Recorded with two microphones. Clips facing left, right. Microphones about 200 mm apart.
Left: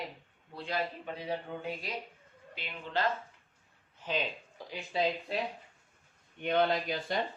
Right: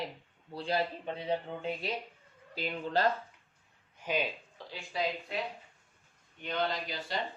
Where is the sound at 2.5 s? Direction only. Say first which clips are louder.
Right 6 dB; 35° right (ahead or behind).